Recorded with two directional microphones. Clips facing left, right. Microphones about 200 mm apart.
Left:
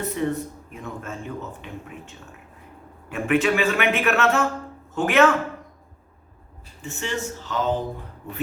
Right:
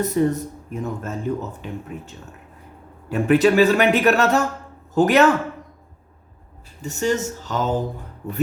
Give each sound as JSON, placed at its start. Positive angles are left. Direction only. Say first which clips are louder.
{"t": 0.0, "sound": "speech", "louder": "right 5 dB", "side_deg": -40}
{"t": 6.8, "sound": "speech", "louder": "right 7 dB", "side_deg": -40}